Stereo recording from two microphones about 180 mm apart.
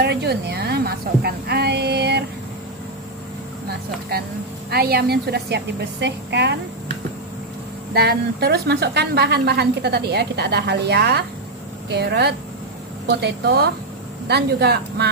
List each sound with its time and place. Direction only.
0.0 s a sound: 65° right (ahead or behind)
4.1 s a woman's voice: 60° right (ahead or behind)
7.9 s a woman's voice: 65° right (ahead or behind)